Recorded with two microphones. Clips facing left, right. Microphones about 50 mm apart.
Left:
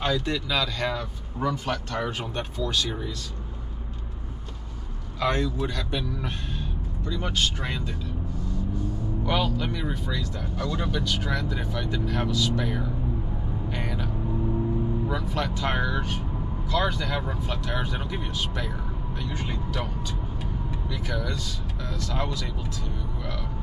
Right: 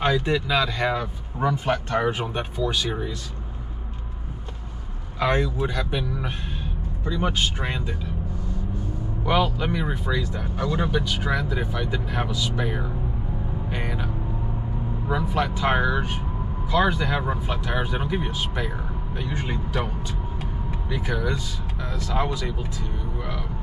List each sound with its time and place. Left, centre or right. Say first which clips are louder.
0.0 s speech: right 4 dB; right
5.2 s speech: right 3 dB; centre
9.2 s speech: right 4 dB; centre
13.7 s vehicle: right 1 dB; centre
15.0 s speech: right 4 dB; centre
20.9 s speech: right 6 dB; right